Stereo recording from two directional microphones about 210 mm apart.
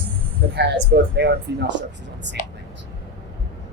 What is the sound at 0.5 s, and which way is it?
A woman's voice, 55° right (ahead or behind).